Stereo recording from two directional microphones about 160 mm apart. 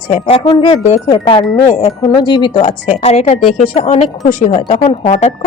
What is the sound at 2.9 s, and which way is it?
Speech, 45° left (ahead or behind).